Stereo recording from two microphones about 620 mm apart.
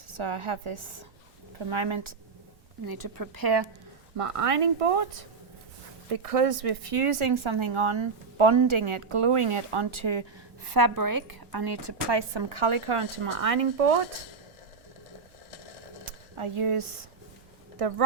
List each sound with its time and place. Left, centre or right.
0.1 s speech: right
2.8 s a woman's voice: right
4.2 s speech: right
16.4 s speech: right